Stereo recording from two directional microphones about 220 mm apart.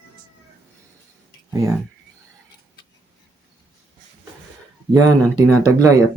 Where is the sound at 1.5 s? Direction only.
15° right (ahead or behind).